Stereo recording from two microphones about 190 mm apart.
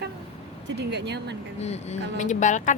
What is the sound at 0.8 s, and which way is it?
Speech, 60° right (ahead or behind).